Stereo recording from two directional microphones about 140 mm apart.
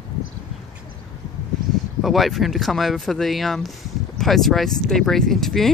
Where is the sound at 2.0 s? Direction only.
Centre (ahead or behind).